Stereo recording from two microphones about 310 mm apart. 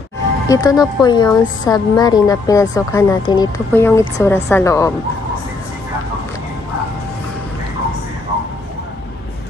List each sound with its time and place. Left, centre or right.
0.5 s a woman's voice: centre